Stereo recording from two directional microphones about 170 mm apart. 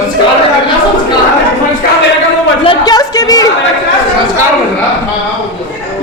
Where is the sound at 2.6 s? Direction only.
25° left (ahead or behind).